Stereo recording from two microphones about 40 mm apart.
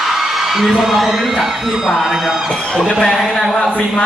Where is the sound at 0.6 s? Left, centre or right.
Centre.